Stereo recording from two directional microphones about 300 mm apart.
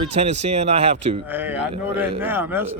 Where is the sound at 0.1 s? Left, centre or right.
Right.